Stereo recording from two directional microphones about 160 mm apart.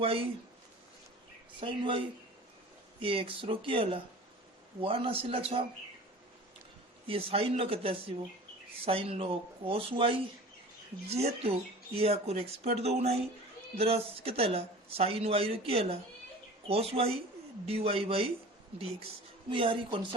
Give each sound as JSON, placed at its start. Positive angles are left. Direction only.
{"t": 0.0, "sound": "speech", "side_deg": -35}
{"t": 1.6, "sound": "speech", "side_deg": -30}
{"t": 3.0, "sound": "speech", "side_deg": -35}
{"t": 7.1, "sound": "speech", "side_deg": -35}
{"t": 19.5, "sound": "speech", "side_deg": -35}